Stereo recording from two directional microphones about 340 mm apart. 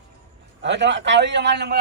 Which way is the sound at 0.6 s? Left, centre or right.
Right.